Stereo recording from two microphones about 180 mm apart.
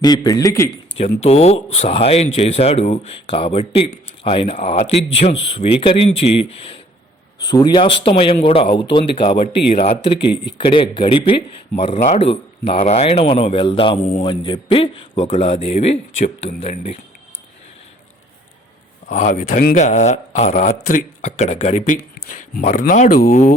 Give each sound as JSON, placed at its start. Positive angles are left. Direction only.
{"t": 0.0, "sound": "speech", "side_deg": 20}
{"t": 0.9, "sound": "speech", "side_deg": 35}
{"t": 11.9, "sound": "speech", "side_deg": 40}
{"t": 15.3, "sound": "speech", "side_deg": 40}
{"t": 19.0, "sound": "speech", "side_deg": 45}